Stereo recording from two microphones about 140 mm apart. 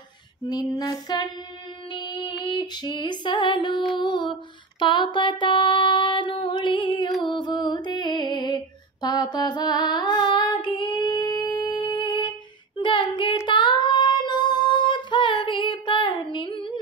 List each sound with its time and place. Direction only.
0.5 s female singing: 30° left (ahead or behind)
3.9 s music: 35° left (ahead or behind)
13.5 s child singing: 35° left (ahead or behind)